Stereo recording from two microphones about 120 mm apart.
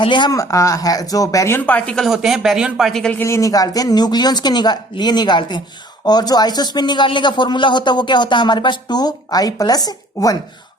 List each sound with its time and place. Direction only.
0.0 s speech: 40° left (ahead or behind)
0.3 s speech: 25° left (ahead or behind)
2.0 s speech: 5° right (ahead or behind)
3.2 s speech: 25° left (ahead or behind)